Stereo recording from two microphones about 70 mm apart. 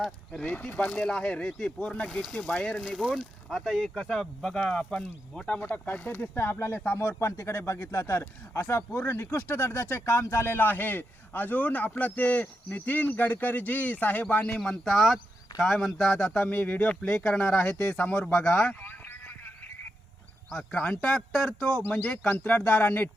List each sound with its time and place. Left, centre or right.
0.4 s speech: left
2.9 s speech: centre
5.5 s speech: left
14.6 s speech: centre; by 19.1 s left
20.5 s speech: centre
22.0 s speech: centre